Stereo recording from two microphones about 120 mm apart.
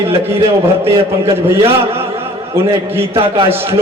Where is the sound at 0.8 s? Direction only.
20° right (ahead or behind).